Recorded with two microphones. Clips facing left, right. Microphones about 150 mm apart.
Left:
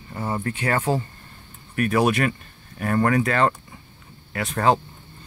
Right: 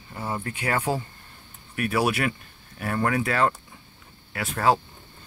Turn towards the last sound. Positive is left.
turn(degrees=0)  # may be behind; listen again after turning